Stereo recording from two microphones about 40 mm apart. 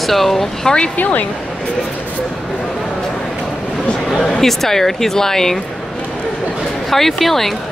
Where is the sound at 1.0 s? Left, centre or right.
Left.